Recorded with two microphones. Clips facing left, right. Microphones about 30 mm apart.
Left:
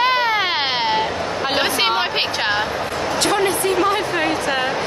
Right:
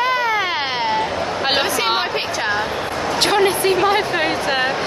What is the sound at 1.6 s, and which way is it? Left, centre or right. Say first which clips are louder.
Speech: left 1 dB; left.